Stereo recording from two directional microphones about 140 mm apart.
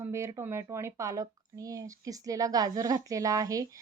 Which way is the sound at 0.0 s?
20° right (ahead or behind).